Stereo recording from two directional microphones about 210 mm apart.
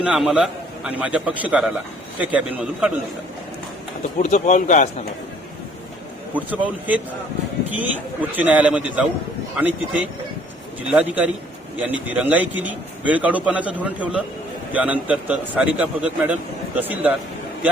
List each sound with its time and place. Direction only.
0.0 s a man's voice: 5° right (ahead or behind)
4.2 s speech: 35° left (ahead or behind)
6.3 s a man's voice: 10° right (ahead or behind)